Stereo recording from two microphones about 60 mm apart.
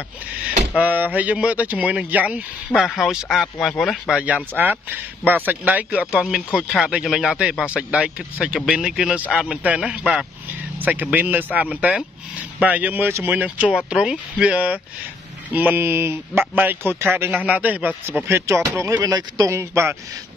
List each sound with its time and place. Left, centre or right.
0.5 s speech: right
2.7 s speech: centre
3.6 s speech: centre
4.1 s speech: right
5.9 s speech: centre
7.7 s speech: centre
10.8 s speech: right
15.5 s speech: right
17.4 s speech: right
18.2 s speech: right
18.9 s speech: right
19.5 s speech: right